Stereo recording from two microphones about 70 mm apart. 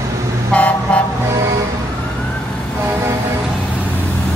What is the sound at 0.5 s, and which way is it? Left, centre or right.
Vehicle, centre.